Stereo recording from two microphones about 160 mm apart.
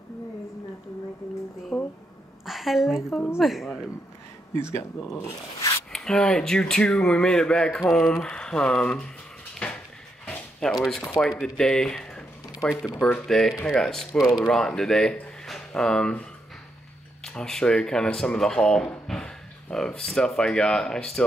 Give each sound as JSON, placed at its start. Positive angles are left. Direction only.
{"t": 1.7, "sound": "a sound", "side_deg": 5}
{"t": 2.4, "sound": "a woman's voice", "side_deg": 0}
{"t": 4.6, "sound": "speech", "side_deg": 15}
{"t": 5.9, "sound": "speech", "side_deg": 5}
{"t": 9.6, "sound": "a sound", "side_deg": 5}
{"t": 10.2, "sound": "speech", "side_deg": 5}